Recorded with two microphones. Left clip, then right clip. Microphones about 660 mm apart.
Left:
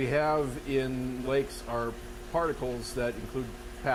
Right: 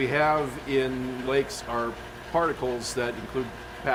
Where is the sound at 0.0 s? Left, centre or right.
Left.